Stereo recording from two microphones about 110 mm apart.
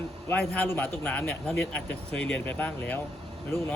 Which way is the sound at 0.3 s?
15° left (ahead or behind).